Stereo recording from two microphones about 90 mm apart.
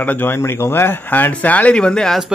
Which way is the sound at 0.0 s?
20° left (ahead or behind).